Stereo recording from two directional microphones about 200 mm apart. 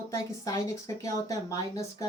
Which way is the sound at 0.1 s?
15° left (ahead or behind).